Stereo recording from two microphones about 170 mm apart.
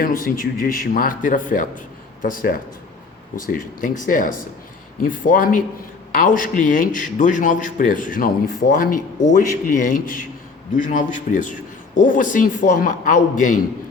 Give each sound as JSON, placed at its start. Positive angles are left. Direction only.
{"t": 0.0, "sound": "a man's voice", "side_deg": 55}